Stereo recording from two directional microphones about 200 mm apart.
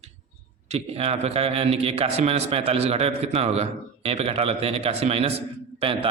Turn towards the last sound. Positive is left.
turn(degrees=-30)  # may be behind; listen again after turning